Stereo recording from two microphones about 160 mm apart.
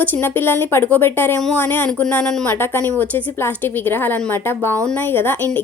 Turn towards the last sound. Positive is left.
turn(degrees=15)  # may be behind; listen again after turning